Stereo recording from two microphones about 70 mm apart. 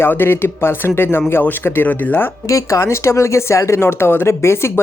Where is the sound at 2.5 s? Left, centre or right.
Left.